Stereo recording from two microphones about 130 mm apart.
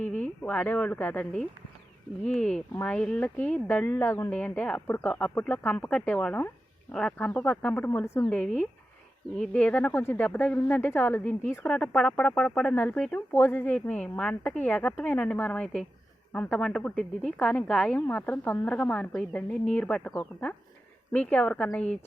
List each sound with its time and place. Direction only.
0.0 s speech: 10° left (ahead or behind)
9.3 s speech: 10° left (ahead or behind)